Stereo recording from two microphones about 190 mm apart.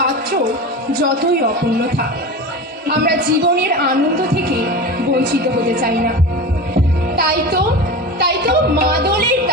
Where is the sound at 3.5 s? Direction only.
55° right (ahead or behind).